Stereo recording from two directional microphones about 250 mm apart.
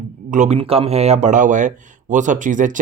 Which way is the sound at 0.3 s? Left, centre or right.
Right.